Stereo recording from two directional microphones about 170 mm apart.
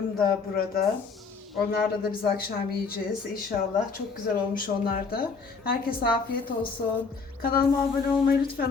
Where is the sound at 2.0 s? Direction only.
60° left (ahead or behind).